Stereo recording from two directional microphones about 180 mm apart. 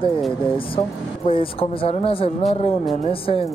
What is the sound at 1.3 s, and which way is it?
Speech, 30° left (ahead or behind).